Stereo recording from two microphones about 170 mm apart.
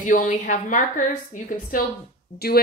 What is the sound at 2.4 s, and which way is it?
Speech, 70° left (ahead or behind).